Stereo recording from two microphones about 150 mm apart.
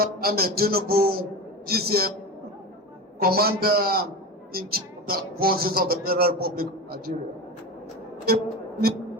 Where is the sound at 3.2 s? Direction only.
90° right.